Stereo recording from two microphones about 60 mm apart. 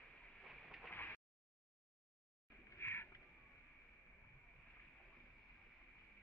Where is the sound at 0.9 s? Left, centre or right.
Left.